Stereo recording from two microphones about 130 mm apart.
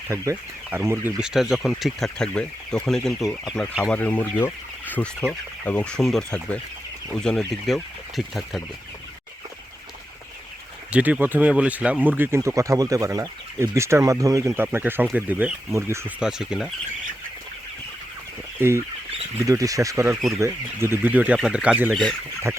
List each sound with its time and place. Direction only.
0.1 s speech: 20° right (ahead or behind)
1.2 s speech: 5° right (ahead or behind)
10.9 s speech: 10° right (ahead or behind)
16.2 s speech: 5° right (ahead or behind)
18.6 s speech: 15° right (ahead or behind)
19.4 s speech: 25° right (ahead or behind)